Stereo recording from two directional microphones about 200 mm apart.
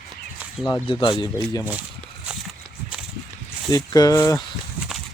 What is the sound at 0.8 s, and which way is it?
Speech, 25° left (ahead or behind).